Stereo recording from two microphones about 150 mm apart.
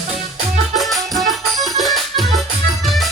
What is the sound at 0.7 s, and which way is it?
Music, centre (ahead or behind).